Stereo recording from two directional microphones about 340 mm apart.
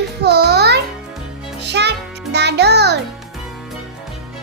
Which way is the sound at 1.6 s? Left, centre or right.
Right.